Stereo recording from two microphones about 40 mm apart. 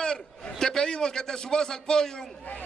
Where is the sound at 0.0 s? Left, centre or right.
Centre.